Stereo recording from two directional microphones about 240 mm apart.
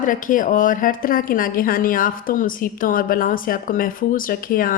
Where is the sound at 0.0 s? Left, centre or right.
Left.